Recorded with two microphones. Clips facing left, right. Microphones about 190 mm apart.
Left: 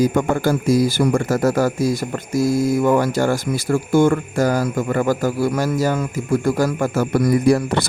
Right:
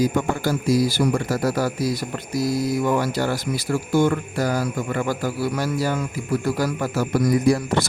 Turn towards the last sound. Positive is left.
turn(degrees=60)  # may be behind; listen again after turning